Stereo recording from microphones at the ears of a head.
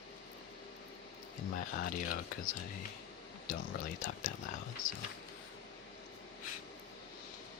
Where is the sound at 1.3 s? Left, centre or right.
Left.